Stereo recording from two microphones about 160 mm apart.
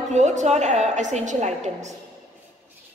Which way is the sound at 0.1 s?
45° right (ahead or behind).